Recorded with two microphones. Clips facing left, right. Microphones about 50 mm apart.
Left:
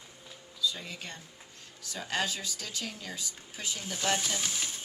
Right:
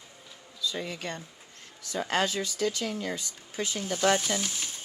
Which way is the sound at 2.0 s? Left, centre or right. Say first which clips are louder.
Right 5 dB; right.